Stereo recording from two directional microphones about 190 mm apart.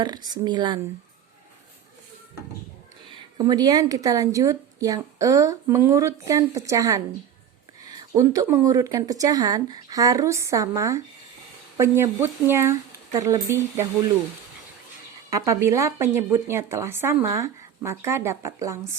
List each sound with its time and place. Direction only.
0.0 s speech: 20° right (ahead or behind)
3.1 s a woman's voice: 20° right (ahead or behind)
15.3 s a woman's voice: 15° right (ahead or behind)